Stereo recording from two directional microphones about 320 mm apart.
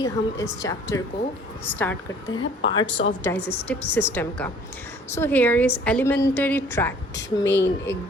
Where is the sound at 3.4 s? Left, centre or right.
Left.